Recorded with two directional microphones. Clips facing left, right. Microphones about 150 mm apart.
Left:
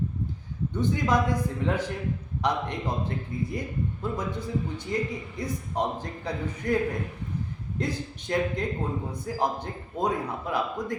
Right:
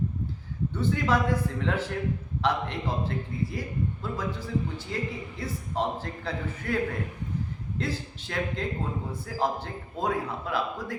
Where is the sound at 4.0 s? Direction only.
20° left (ahead or behind).